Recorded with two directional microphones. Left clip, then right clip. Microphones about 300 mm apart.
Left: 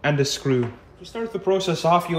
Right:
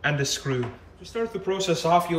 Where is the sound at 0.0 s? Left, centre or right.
Centre.